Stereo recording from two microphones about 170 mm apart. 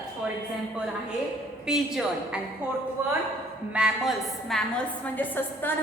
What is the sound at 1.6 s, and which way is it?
A woman's voice, 5° right (ahead or behind).